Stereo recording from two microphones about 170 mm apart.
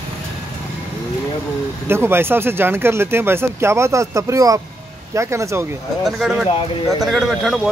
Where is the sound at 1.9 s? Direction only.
15° right (ahead or behind).